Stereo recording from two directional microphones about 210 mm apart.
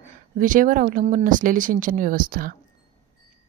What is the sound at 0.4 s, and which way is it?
Speech, 40° right (ahead or behind).